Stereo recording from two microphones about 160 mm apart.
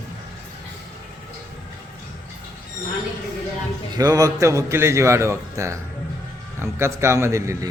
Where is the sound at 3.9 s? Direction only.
20° right (ahead or behind).